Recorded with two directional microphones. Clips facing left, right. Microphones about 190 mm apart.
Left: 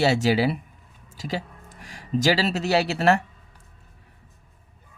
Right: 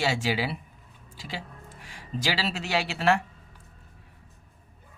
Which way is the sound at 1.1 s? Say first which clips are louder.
Left 9 dB; 40° left (ahead or behind).